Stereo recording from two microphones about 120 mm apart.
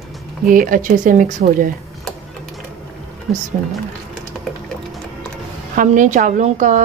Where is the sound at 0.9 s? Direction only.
90° right.